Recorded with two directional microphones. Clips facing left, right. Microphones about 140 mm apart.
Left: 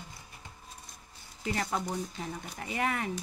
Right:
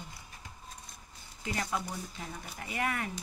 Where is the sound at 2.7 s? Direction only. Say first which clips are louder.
Left 2 dB; 30° left (ahead or behind).